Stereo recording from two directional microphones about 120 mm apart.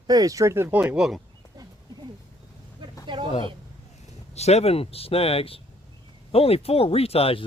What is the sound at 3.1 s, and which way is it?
Speech, 40° right (ahead or behind).